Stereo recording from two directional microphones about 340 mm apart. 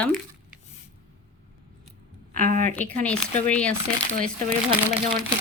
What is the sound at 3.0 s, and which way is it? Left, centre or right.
Speech, centre.